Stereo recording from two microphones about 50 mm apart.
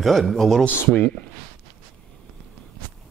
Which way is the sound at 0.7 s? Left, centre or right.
Left.